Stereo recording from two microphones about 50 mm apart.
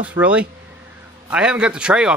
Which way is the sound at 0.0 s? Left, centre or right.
Right.